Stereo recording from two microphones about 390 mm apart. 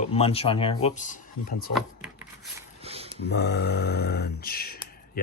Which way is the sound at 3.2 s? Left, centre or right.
Left.